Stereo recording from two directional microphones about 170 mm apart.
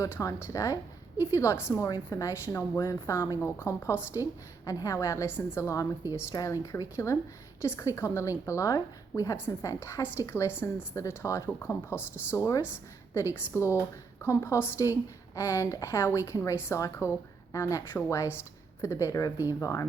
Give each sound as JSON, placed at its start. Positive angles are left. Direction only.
{"t": 0.0, "sound": "a woman's voice", "side_deg": 20}